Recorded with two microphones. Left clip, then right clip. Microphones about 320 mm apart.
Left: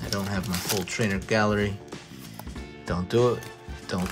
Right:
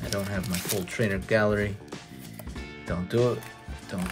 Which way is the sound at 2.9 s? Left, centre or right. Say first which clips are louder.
Left 3 dB; centre.